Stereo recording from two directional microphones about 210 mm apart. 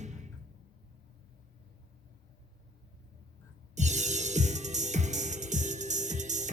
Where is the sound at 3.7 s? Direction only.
35° right (ahead or behind).